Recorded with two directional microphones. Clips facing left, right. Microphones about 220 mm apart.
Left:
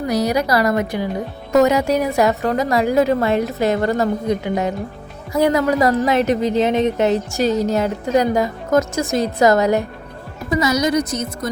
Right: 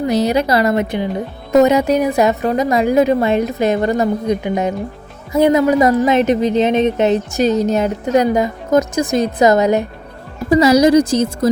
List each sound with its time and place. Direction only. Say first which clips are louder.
0.1 s a woman's voice: right 2 dB; 25° right (ahead or behind)
10.5 s a woman's voice: right 8 dB; 30° right (ahead or behind)